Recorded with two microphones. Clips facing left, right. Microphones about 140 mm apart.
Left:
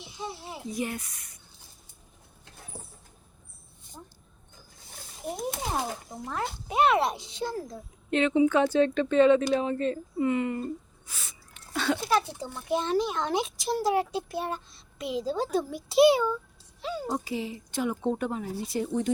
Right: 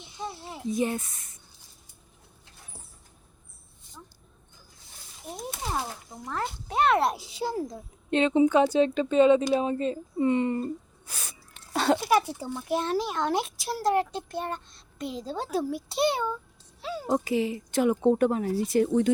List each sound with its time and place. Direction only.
0.7 s speech: 25° right (ahead or behind)
6.3 s a child's voice: 15° left (ahead or behind); by 8.4 s 30° right (ahead or behind)
8.4 s a child's voice: 15° right (ahead or behind)
10.2 s a sound: 30° right (ahead or behind)
12.0 s a child's voice: 10° right (ahead or behind); by 16.2 s 5° left (ahead or behind)
16.8 s a sound: 5° right (ahead or behind)
17.1 s speech: 70° right (ahead or behind)
18.7 s speech: 80° right